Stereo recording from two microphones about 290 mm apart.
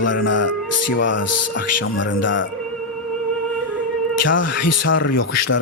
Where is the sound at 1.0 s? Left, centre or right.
Left.